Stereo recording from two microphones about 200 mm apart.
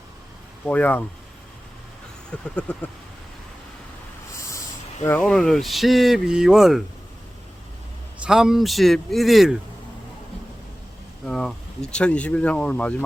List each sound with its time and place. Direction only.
0.6 s speech: 10° left (ahead or behind)
2.3 s speech: 5° left (ahead or behind)
4.4 s a sound: 15° left (ahead or behind)
5.0 s speech: 5° left (ahead or behind)
8.2 s speech: 5° right (ahead or behind)
11.3 s speech: 5° left (ahead or behind)